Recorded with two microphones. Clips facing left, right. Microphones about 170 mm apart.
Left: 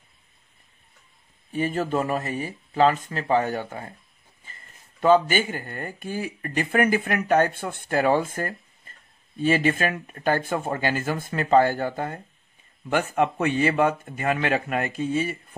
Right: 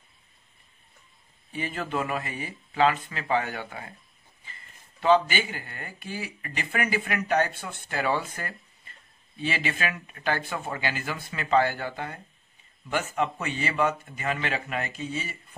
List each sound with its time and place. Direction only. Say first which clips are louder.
1.5 s speech: left 7 dB; 45° left (ahead or behind)
5.0 s speech: left 3 dB; 45° left (ahead or behind)